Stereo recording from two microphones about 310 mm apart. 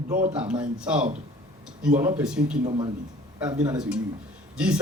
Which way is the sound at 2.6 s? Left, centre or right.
Centre.